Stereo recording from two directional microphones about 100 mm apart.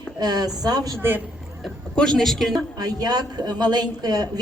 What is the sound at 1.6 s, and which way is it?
A woman's voice, 5° left (ahead or behind).